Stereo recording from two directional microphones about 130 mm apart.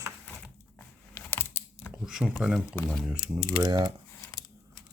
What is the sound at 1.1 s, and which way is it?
Computer keyboard, 15° left (ahead or behind).